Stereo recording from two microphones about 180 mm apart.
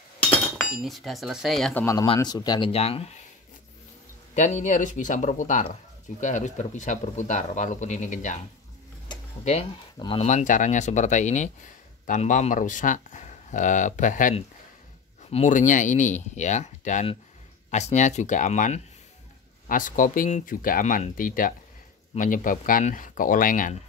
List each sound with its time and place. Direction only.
0.2 s speech: centre (ahead or behind)
2.0 s speech: 20° left (ahead or behind)
2.7 s speech: 35° left (ahead or behind)
4.4 s speech: 45° left (ahead or behind)
9.4 s speech: 35° left (ahead or behind)
10.2 s speech: 45° left (ahead or behind)